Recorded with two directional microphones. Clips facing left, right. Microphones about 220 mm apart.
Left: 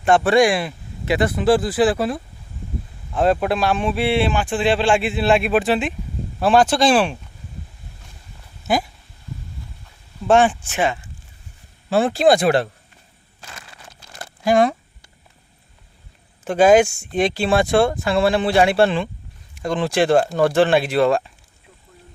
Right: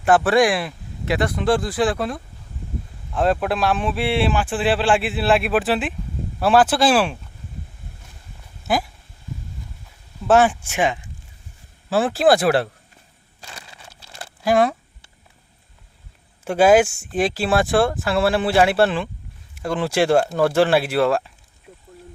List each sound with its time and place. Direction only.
0.0 s speech: 5° right (ahead or behind)
8.6 s speech: centre (ahead or behind)
10.2 s speech: 5° right (ahead or behind)
11.9 s speech: 5° right (ahead or behind)
14.4 s a sound: centre (ahead or behind)
16.4 s speech: 10° right (ahead or behind)